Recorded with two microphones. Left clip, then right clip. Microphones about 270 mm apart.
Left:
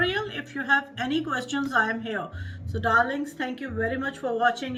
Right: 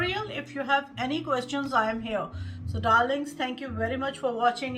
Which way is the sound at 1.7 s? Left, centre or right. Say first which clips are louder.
Left 2 dB; right.